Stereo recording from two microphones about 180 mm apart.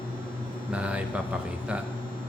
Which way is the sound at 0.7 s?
5° right (ahead or behind).